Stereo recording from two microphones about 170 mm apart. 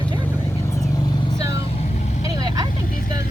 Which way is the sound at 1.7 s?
40° left (ahead or behind).